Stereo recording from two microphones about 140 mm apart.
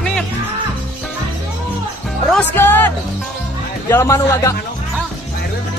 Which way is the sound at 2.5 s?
15° left (ahead or behind).